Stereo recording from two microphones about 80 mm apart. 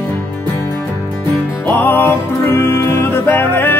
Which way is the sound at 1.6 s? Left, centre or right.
Left.